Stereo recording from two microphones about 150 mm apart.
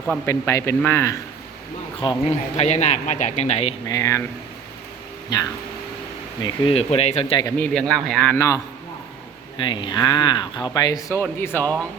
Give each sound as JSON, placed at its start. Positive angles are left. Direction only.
{"t": 0.3, "sound": "speech", "side_deg": 20}
{"t": 2.0, "sound": "speech", "side_deg": 40}
{"t": 3.8, "sound": "speech", "side_deg": 20}
{"t": 5.3, "sound": "speech", "side_deg": 25}
{"t": 6.4, "sound": "speech", "side_deg": 40}
{"t": 7.6, "sound": "a man's voice", "side_deg": 5}
{"t": 8.4, "sound": "speech", "side_deg": 20}
{"t": 9.6, "sound": "speech", "side_deg": 30}
{"t": 11.2, "sound": "speech", "side_deg": 15}